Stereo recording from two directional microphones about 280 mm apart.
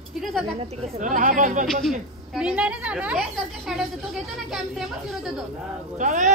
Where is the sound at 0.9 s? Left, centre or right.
Right.